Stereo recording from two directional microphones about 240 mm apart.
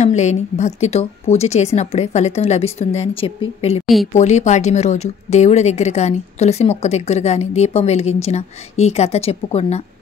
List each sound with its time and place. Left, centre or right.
0.0 s a woman's voice: left
3.8 s a woman's voice: centre
4.1 s a woman's voice: left